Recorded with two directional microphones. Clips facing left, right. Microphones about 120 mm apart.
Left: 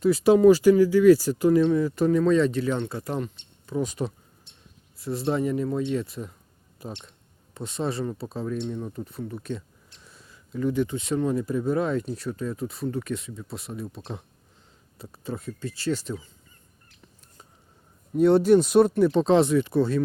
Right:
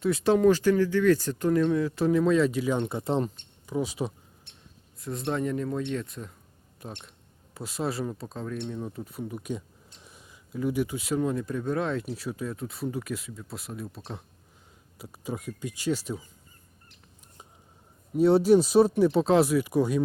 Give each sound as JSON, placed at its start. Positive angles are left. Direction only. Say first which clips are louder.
{"t": 0.0, "sound": "speech", "louder": "left 5 dB", "side_deg": 0}
{"t": 3.7, "sound": "speech", "louder": "left 2 dB", "side_deg": -5}
{"t": 4.5, "sound": "a sound", "louder": "right 1 dB", "side_deg": -60}
{"t": 4.9, "sound": "speech", "louder": "left 4 dB", "side_deg": 0}
{"t": 12.0, "sound": "speech", "louder": "left 3 dB", "side_deg": -10}
{"t": 18.1, "sound": "speech", "louder": "left 2 dB", "side_deg": -5}